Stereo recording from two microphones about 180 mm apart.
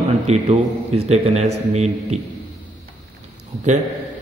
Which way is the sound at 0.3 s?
35° right (ahead or behind).